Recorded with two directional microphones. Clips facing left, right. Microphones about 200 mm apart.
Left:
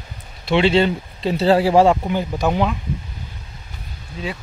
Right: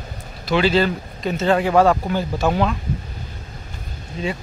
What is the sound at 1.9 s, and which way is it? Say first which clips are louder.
Speech: left 1 dB; 15° left (ahead or behind).